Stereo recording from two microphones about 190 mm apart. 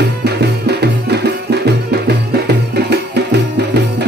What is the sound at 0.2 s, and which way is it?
Music, 60° right (ahead or behind).